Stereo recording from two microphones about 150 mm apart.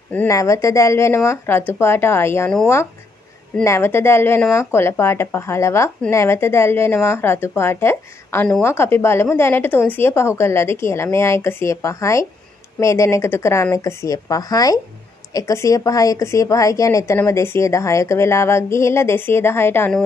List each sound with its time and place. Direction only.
0.1 s a woman's voice: 15° left (ahead or behind)
3.6 s a woman's voice: 20° left (ahead or behind)